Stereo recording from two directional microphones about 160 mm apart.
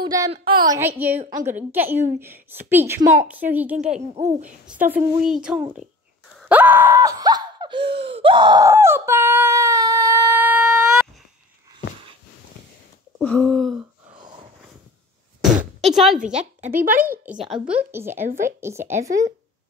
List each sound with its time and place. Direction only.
0.0 s a woman's voice: 20° right (ahead or behind)
0.7 s a woman's voice: 10° right (ahead or behind)
3.7 s speech: 45° right (ahead or behind)
4.8 s speech: 5° right (ahead or behind)
6.5 s groan: 10° right (ahead or behind); by 8.6 s 30° right (ahead or behind)
8.6 s a sound: 15° right (ahead or behind)
13.2 s speech: 5° left (ahead or behind)
15.4 s a sound: centre (ahead or behind)
16.3 s speech: 50° right (ahead or behind)
16.9 s speech: 65° right (ahead or behind)
17.3 s a woman's voice: 5° right (ahead or behind)